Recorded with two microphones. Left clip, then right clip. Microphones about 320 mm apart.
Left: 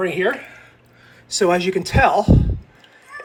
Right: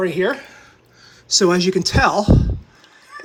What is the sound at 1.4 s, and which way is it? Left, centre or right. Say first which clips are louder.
Speech: left 1 dB; centre.